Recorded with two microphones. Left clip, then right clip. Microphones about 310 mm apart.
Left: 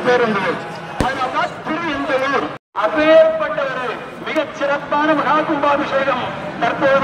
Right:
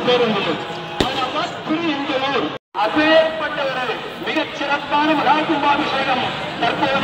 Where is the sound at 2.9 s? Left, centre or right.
Centre.